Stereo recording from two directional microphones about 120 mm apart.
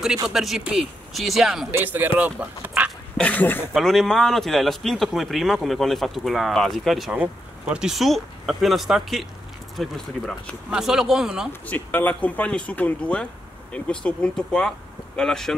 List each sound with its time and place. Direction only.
0.3 s speech: 5° right (ahead or behind)
1.7 s speech: 15° right (ahead or behind)
3.2 s speech: 15° left (ahead or behind)
3.7 s speech: centre (ahead or behind)
11.6 s speech: 15° left (ahead or behind)